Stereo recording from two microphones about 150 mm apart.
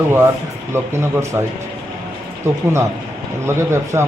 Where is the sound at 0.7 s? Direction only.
20° right (ahead or behind).